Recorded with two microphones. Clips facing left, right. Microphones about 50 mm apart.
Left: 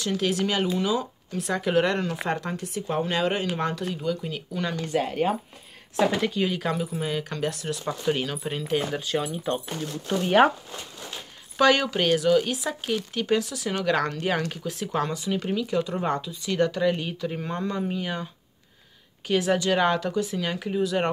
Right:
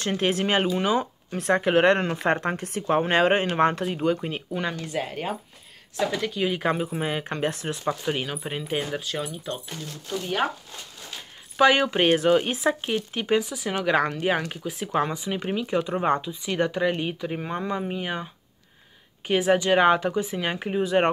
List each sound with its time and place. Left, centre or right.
0.0 s speech: right
4.7 s speech: centre
5.9 s speech: centre
6.5 s speech: right
8.0 s speech: centre
8.9 s speech: centre
10.0 s speech: left
11.5 s speech: centre; by 12.9 s right
12.9 s speech: right